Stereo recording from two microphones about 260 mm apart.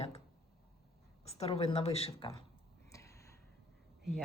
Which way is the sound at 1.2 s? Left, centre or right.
Left.